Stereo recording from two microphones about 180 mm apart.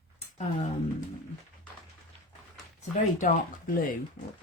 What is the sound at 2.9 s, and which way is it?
Speech, 45° left (ahead or behind).